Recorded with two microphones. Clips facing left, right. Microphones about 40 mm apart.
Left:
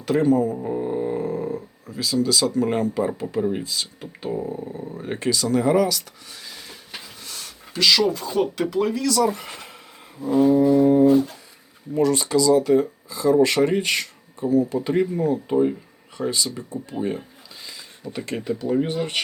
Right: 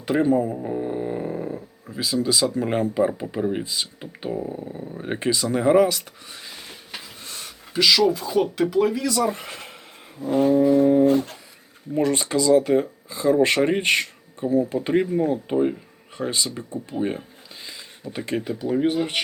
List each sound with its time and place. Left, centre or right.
0.0 s speech: centre
0.6 s snoring: centre
2.0 s speech: centre
4.3 s a sound: centre
5.0 s speech: right
7.2 s a sound: right
7.8 s speech: centre
9.0 s speech: centre
10.2 s a sound: right
11.9 s speech: right
18.1 s speech: centre